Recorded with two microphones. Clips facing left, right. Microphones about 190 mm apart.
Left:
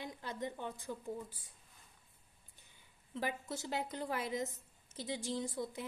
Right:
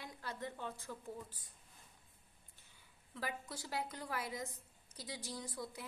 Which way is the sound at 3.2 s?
25° left (ahead or behind).